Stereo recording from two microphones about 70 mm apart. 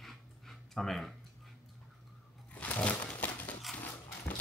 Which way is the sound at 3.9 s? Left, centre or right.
Left.